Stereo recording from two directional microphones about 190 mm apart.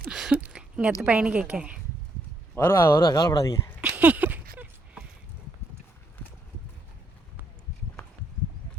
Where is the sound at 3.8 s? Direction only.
5° right (ahead or behind).